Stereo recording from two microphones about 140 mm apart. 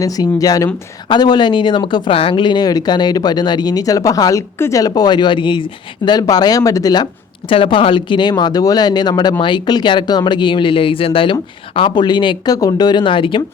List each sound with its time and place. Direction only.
0.0 s speech: 25° left (ahead or behind)
7.5 s speech: 40° left (ahead or behind)